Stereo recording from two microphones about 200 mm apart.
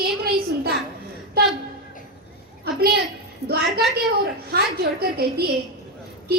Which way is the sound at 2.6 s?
50° right (ahead or behind).